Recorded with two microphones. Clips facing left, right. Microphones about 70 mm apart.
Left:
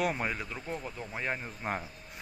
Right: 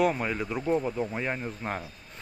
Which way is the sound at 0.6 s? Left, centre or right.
Right.